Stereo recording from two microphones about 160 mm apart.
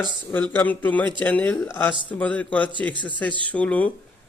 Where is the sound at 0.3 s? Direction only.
10° left (ahead or behind).